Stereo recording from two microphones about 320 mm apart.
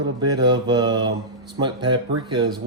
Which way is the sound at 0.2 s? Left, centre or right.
Centre.